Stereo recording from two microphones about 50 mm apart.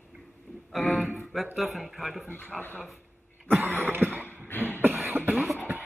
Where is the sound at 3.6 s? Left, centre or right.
Right.